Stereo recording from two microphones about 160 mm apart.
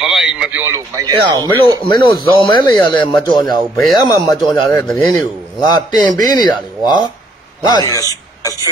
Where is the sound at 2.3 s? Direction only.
30° left (ahead or behind).